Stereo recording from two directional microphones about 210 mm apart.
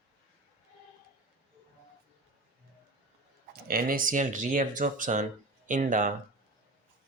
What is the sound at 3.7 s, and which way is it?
Speech, 45° right (ahead or behind).